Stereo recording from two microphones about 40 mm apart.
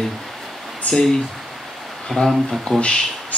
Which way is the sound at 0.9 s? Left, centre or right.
Left.